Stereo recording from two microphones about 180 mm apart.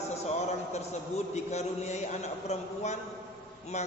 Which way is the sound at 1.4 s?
40° left (ahead or behind).